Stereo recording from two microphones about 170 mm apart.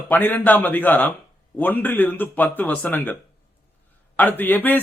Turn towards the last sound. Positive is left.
turn(degrees=10)  # may be behind; listen again after turning